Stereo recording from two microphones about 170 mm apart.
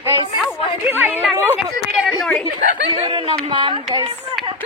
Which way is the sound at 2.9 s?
35° right (ahead or behind).